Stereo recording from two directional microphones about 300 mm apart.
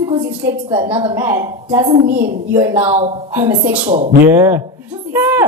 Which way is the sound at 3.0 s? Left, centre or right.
Centre.